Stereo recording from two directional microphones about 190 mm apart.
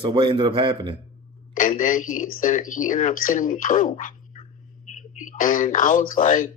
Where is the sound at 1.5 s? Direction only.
45° left (ahead or behind).